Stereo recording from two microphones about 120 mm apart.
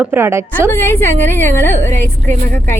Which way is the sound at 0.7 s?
20° left (ahead or behind).